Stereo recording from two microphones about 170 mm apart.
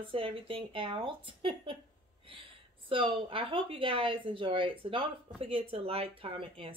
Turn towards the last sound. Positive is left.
turn(degrees=-35)  # may be behind; listen again after turning